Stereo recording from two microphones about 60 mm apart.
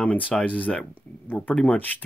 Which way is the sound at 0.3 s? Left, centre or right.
Centre.